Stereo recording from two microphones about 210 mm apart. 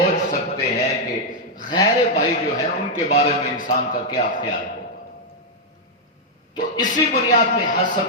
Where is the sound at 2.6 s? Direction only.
35° left (ahead or behind).